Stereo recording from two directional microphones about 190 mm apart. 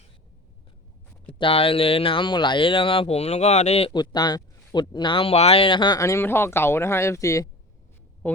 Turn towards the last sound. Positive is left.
turn(degrees=15)  # may be behind; listen again after turning